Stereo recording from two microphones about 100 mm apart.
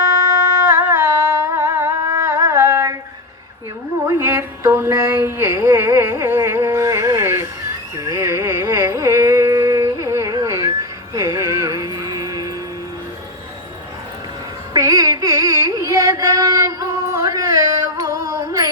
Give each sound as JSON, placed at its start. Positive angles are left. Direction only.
{"t": 0.7, "sound": "humming", "side_deg": -25}
{"t": 4.0, "sound": "a sound", "side_deg": -25}
{"t": 7.9, "sound": "music", "side_deg": -30}
{"t": 8.6, "sound": "carnatic music", "side_deg": -35}
{"t": 14.7, "sound": "carnatic music", "side_deg": -35}
{"t": 17.1, "sound": "music", "side_deg": -30}